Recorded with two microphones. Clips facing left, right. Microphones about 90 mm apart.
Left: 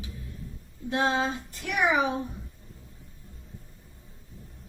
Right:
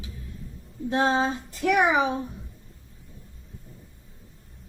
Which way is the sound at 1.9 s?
30° right (ahead or behind).